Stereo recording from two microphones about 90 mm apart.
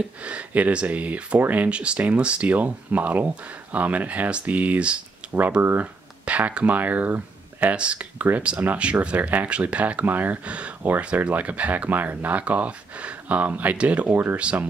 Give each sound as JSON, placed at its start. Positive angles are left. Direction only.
{"t": 0.2, "sound": "speech", "side_deg": -15}